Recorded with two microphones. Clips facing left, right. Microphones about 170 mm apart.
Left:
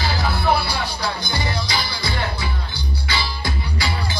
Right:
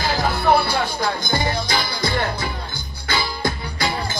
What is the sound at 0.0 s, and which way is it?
Music, 45° right (ahead or behind).